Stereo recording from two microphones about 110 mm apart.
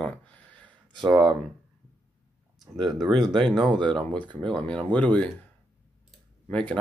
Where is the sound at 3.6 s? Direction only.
45° right (ahead or behind).